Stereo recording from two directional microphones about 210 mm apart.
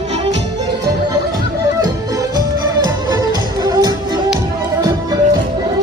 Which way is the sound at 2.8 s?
20° right (ahead or behind).